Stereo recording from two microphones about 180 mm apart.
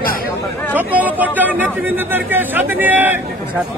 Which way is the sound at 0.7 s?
10° right (ahead or behind).